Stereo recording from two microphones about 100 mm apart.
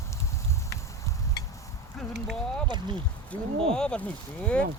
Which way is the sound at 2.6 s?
50° right (ahead or behind).